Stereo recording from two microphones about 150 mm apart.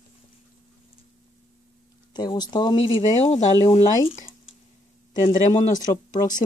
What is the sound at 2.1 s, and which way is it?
Speech, 30° left (ahead or behind).